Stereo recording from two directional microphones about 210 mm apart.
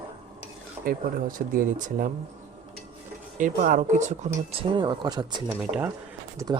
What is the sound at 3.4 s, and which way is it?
Speech, 35° right (ahead or behind).